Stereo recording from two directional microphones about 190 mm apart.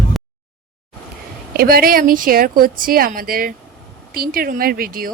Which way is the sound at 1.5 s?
50° right (ahead or behind).